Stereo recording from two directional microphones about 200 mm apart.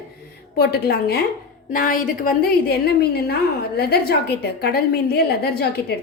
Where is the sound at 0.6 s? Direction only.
55° left (ahead or behind).